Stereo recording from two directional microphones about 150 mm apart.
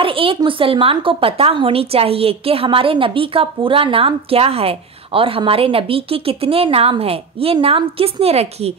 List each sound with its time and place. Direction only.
0.0 s a woman's voice: 35° right (ahead or behind)